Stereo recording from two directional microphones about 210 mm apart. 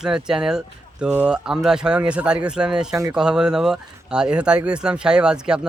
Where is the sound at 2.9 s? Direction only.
15° right (ahead or behind).